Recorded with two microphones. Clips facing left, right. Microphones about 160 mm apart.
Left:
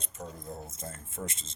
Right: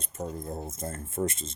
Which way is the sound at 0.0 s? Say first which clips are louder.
Right 7 dB; 50° right (ahead or behind).